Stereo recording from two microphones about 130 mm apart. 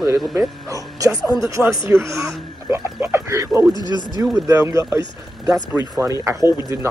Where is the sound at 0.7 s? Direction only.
25° right (ahead or behind).